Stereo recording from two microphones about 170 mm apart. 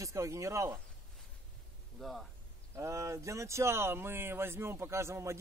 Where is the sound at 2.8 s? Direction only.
15° right (ahead or behind).